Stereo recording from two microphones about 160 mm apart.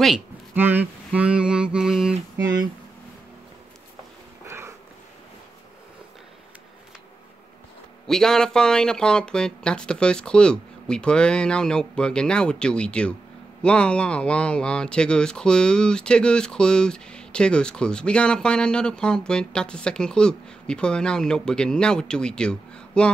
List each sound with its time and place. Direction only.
0.6 s mantra: 10° right (ahead or behind)
4.5 s a sound: 15° right (ahead or behind)
8.1 s speech: 5° left (ahead or behind)